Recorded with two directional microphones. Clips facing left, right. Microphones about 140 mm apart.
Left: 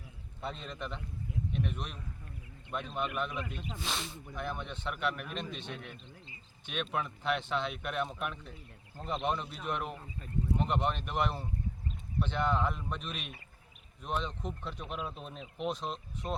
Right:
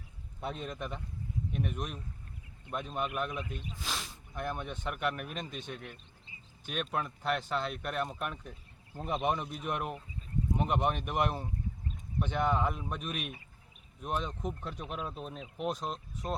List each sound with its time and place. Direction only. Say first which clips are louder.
0.4 s speech: right 2 dB; 10° right (ahead or behind)
5.2 s a man's voice: even; 50° right (ahead or behind)
6.7 s speech: right 1 dB; centre (ahead or behind)
10.0 s a sound: even; 65° left (ahead or behind)
10.6 s speech: right 3 dB; 10° right (ahead or behind)